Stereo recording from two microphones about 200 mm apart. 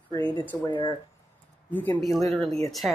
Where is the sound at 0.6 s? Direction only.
25° left (ahead or behind).